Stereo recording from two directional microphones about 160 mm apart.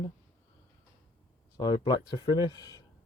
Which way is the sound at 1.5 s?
25° left (ahead or behind).